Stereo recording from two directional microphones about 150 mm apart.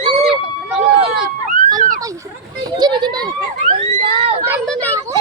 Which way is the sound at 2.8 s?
30° right (ahead or behind).